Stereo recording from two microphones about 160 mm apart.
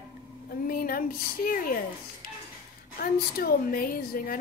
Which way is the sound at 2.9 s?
65° left (ahead or behind).